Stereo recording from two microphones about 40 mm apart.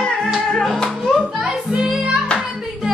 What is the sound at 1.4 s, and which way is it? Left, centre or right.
Music, centre.